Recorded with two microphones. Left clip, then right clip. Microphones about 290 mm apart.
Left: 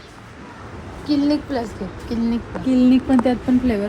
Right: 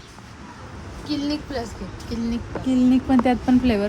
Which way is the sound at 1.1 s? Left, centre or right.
Centre.